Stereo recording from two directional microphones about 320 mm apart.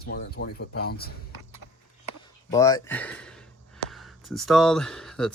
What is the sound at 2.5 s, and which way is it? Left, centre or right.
Speech, centre.